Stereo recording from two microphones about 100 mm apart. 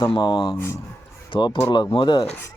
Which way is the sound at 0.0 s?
55° left (ahead or behind).